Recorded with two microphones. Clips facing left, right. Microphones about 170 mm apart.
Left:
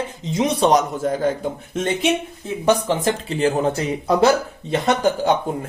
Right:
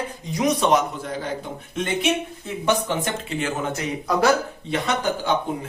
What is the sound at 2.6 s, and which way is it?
Speech, 35° left (ahead or behind).